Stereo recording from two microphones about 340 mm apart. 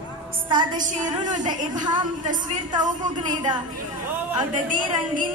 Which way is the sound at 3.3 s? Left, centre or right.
Centre.